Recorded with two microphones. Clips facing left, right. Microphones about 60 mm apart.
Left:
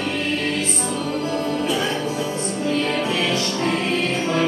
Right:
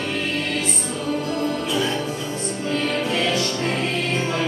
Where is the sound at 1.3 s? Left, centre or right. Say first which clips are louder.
Left 1 dB; left.